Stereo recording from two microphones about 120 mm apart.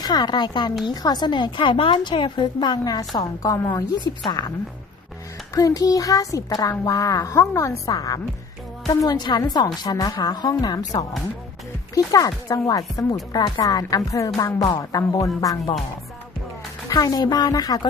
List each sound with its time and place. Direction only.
0.0 s a woman's voice: 35° left (ahead or behind)
5.5 s a woman's voice: 30° left (ahead or behind)
16.9 s a woman's voice: 30° left (ahead or behind)